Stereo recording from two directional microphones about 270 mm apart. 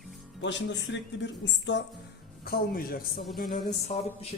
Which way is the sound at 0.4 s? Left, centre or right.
Left.